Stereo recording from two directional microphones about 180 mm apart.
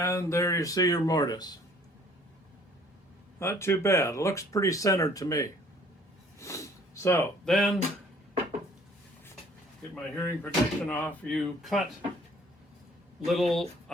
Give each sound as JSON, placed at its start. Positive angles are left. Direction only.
{"t": 0.0, "sound": "speech", "side_deg": 15}
{"t": 3.3, "sound": "speech", "side_deg": 15}
{"t": 6.4, "sound": "a sound", "side_deg": 15}
{"t": 7.4, "sound": "speech", "side_deg": 5}
{"t": 9.9, "sound": "speech", "side_deg": 10}
{"t": 13.2, "sound": "speech", "side_deg": 0}